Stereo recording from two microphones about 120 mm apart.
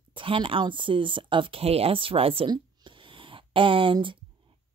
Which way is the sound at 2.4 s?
45° right (ahead or behind).